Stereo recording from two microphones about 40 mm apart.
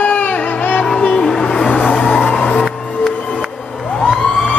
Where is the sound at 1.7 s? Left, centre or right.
Left.